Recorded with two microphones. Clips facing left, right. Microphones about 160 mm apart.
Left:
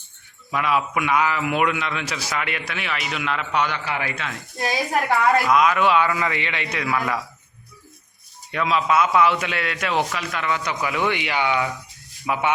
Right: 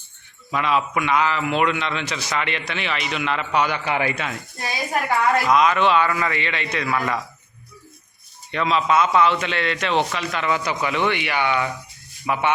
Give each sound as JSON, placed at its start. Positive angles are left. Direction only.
{"t": 0.5, "sound": "a man's voice", "side_deg": 5}
{"t": 3.8, "sound": "speech", "side_deg": -20}
{"t": 5.0, "sound": "a man's voice", "side_deg": 0}
{"t": 8.5, "sound": "a man's voice", "side_deg": 5}